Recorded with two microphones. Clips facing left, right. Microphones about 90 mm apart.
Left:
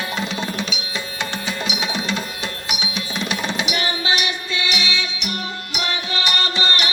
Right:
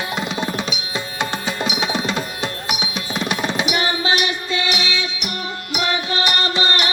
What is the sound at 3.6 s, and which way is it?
Music, 30° right (ahead or behind).